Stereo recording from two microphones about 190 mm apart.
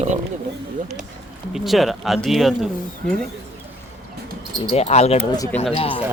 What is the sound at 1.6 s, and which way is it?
Speech, centre (ahead or behind).